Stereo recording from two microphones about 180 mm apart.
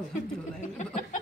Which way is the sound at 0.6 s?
40° left (ahead or behind).